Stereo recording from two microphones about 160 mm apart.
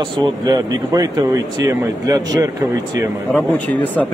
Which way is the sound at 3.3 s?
10° left (ahead or behind).